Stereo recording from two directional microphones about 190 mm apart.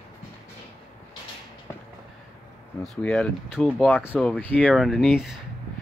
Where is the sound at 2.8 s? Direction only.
5° left (ahead or behind).